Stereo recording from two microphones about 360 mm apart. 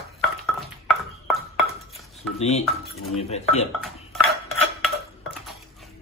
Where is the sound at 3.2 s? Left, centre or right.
Centre.